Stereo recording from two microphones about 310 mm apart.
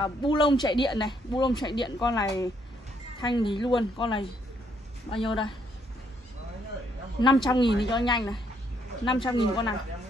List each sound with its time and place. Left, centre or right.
0.0 s speech: centre
7.4 s speech: centre